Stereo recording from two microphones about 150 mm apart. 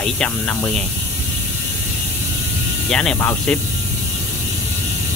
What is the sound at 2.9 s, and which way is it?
Speech, 5° left (ahead or behind).